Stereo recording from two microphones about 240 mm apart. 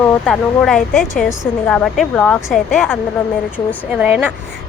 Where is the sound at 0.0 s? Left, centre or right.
Centre.